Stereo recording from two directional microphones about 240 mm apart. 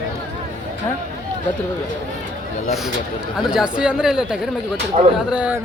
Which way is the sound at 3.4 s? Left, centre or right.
Centre.